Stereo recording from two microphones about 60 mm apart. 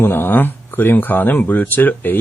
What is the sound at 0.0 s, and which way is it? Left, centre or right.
Speech, left.